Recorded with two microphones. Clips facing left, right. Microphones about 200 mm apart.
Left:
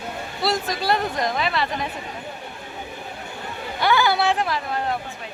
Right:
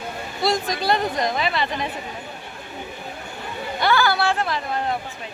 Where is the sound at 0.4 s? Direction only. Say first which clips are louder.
Right 1 dB; 5° left (ahead or behind).